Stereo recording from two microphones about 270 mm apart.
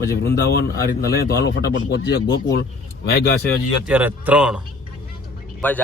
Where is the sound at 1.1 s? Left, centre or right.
Left.